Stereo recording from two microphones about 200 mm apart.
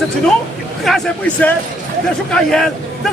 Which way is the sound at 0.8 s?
Centre (ahead or behind).